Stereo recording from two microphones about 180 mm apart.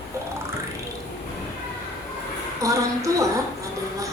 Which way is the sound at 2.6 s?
15° right (ahead or behind).